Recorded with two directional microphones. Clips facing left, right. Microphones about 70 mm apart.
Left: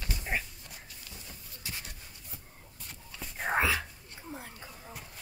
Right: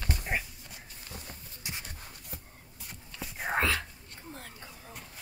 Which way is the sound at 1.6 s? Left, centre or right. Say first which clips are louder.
Right 1 dB; right.